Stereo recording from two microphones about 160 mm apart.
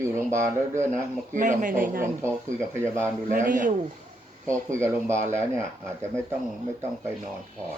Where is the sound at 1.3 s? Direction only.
50° right (ahead or behind).